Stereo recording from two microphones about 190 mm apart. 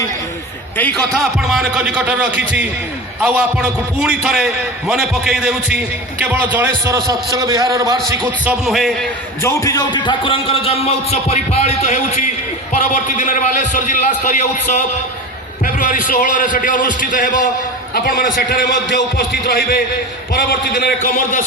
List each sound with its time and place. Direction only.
0.9 s a man's voice: centre (ahead or behind); by 7.9 s 15° right (ahead or behind)
8.4 s a man's voice: centre (ahead or behind)
9.4 s a man's voice: 15° left (ahead or behind); by 21.4 s 45° left (ahead or behind)